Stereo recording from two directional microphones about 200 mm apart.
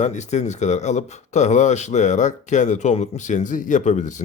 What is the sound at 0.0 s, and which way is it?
Speech, 35° left (ahead or behind).